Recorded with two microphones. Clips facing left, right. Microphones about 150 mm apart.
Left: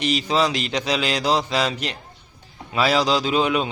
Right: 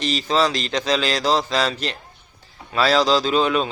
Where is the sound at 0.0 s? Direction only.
10° left (ahead or behind).